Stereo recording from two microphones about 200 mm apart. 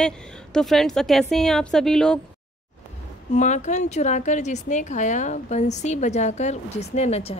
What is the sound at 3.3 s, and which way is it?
Speech, 35° left (ahead or behind).